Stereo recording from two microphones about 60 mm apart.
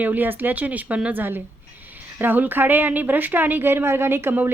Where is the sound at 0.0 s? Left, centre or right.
Right.